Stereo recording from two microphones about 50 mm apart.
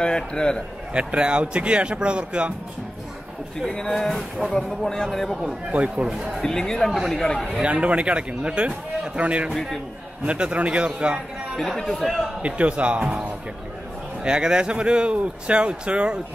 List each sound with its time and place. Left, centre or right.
0.0 s speech: centre
0.9 s speech: right
3.5 s speech: centre
5.7 s speech: right
6.0 s speech: centre
6.4 s speech: centre
7.6 s speech: right
11.5 s speech: centre
12.4 s speech: right
14.2 s speech: centre